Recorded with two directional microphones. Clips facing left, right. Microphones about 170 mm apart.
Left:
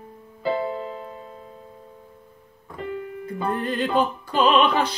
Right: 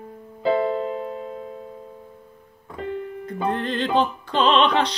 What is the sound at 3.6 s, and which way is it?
Music, 10° left (ahead or behind).